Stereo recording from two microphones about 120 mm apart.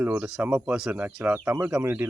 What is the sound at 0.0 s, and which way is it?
Speech, 15° right (ahead or behind).